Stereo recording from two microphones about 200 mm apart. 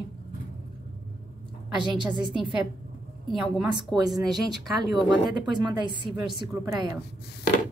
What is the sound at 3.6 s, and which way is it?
Speech, 20° right (ahead or behind).